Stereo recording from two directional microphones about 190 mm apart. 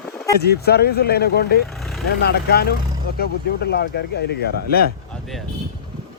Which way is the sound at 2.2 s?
55° left (ahead or behind).